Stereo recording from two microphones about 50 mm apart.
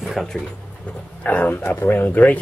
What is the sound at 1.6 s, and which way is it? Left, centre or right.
Speech, left.